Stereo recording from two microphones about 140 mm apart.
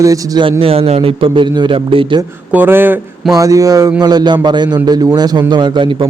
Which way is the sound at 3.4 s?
25° right (ahead or behind).